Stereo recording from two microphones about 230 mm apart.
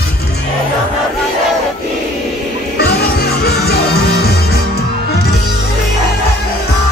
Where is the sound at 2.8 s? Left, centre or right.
Left.